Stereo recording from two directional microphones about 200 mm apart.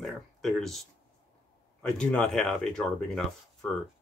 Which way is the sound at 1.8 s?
5° left (ahead or behind).